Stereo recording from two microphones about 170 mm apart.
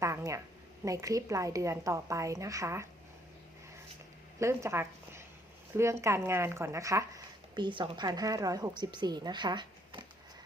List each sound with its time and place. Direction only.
0.0 s a sound: 15° right (ahead or behind)
0.9 s a woman's voice: 20° right (ahead or behind)
4.4 s speech: 15° right (ahead or behind)
7.5 s a woman's voice: 25° right (ahead or behind)